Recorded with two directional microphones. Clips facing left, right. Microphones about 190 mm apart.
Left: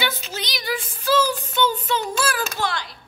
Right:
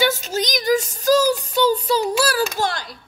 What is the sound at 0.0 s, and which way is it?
Child singing, 45° right (ahead or behind).